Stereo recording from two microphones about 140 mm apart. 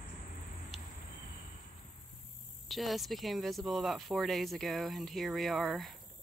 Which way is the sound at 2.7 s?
Centre (ahead or behind).